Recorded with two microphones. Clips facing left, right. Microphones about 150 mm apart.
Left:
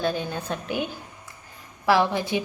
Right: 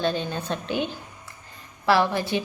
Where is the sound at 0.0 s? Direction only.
10° left (ahead or behind).